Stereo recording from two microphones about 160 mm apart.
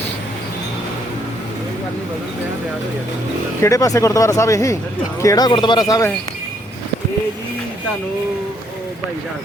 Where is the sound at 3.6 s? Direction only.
20° left (ahead or behind).